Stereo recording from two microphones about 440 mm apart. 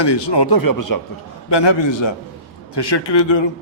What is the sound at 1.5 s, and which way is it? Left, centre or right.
A man's voice, left.